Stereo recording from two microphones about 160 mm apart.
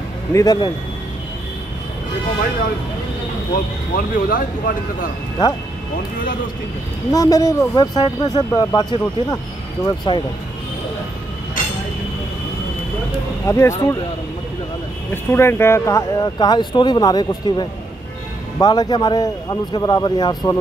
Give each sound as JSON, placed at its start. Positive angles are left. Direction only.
{"t": 0.3, "sound": "speech", "side_deg": 25}
{"t": 3.5, "sound": "speech", "side_deg": 60}
{"t": 7.1, "sound": "speech", "side_deg": 20}
{"t": 13.5, "sound": "speech", "side_deg": 20}
{"t": 15.3, "sound": "speech", "side_deg": 15}